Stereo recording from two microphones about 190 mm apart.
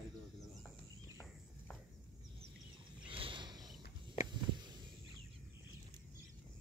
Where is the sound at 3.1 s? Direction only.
25° right (ahead or behind).